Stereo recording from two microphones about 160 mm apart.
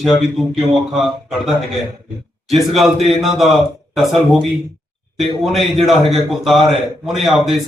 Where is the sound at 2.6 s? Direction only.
Centre (ahead or behind).